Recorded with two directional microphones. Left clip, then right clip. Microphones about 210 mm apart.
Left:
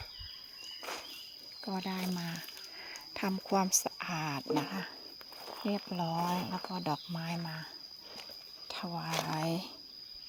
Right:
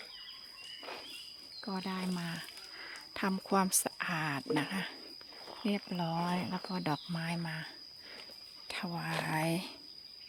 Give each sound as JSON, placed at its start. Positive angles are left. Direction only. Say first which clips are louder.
{"t": 1.6, "sound": "speech", "louder": "left 1 dB", "side_deg": -5}
{"t": 3.2, "sound": "a woman's voice", "louder": "even", "side_deg": -10}
{"t": 8.6, "sound": "a sound", "louder": "even", "side_deg": -20}
{"t": 9.2, "sound": "a woman's voice", "louder": "right 1 dB", "side_deg": -15}